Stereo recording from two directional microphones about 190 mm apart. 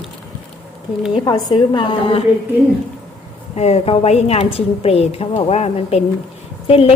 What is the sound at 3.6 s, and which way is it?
A woman's voice, 35° left (ahead or behind).